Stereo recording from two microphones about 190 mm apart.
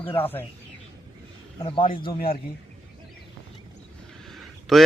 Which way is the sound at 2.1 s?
50° left (ahead or behind).